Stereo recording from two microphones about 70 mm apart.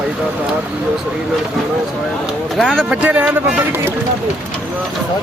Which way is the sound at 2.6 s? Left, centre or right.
Centre.